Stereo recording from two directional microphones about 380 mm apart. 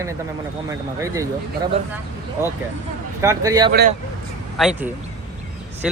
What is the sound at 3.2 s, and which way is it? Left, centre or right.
Speech, centre.